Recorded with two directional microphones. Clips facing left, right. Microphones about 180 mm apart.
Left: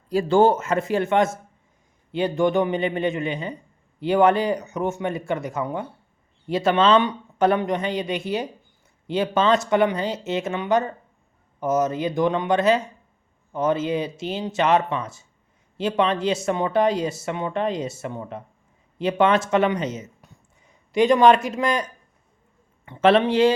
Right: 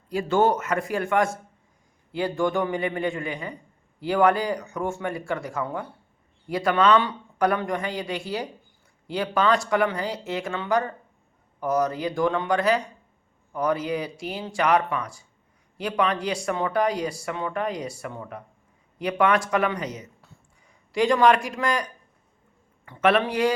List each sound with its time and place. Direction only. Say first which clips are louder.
0.1 s speech: left 4 dB; 30° left (ahead or behind)
22.9 s speech: left 4 dB; 25° left (ahead or behind)